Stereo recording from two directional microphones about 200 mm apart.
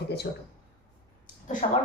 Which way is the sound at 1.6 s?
35° left (ahead or behind).